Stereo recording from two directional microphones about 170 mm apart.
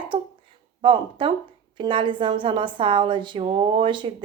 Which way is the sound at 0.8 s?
30° right (ahead or behind).